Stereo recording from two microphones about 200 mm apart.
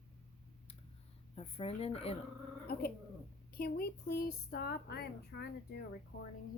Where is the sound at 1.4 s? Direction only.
30° left (ahead or behind).